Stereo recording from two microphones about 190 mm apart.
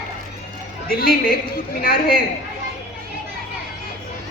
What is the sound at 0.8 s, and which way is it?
A woman's voice, 50° left (ahead or behind).